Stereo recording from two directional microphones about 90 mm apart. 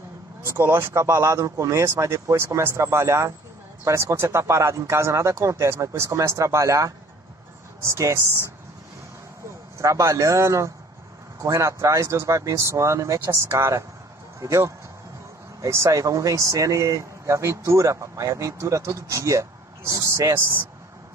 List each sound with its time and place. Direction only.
0.4 s speech: 25° right (ahead or behind)
9.8 s speech: 35° right (ahead or behind)